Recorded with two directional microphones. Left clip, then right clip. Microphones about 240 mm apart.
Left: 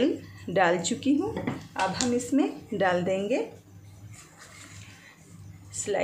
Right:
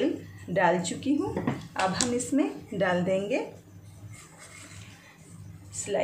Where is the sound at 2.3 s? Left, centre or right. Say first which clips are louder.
Left 1 dB; centre.